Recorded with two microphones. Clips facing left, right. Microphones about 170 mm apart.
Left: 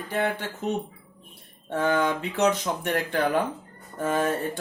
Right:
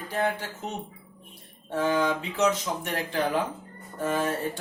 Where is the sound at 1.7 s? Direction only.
55° left (ahead or behind).